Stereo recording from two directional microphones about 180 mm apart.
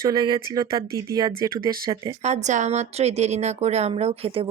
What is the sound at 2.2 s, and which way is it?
Speech, 40° right (ahead or behind).